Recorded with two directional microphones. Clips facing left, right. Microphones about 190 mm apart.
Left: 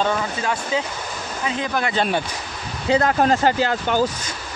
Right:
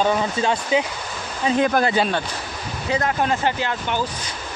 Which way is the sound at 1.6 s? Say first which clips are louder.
Right 7 dB; 50° right (ahead or behind).